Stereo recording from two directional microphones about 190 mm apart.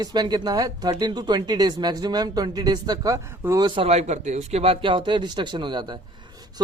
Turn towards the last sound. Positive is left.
turn(degrees=-25)  # may be behind; listen again after turning